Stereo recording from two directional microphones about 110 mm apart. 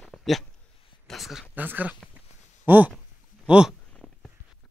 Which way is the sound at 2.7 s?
15° right (ahead or behind).